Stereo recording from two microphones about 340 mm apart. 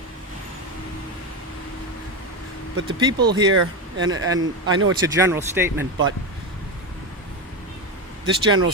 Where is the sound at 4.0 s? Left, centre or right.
Right.